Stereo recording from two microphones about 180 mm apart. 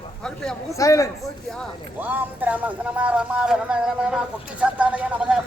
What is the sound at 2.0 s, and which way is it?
Speech, 10° right (ahead or behind).